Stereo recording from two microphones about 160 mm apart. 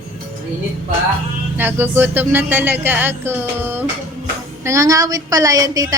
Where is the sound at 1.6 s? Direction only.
10° right (ahead or behind).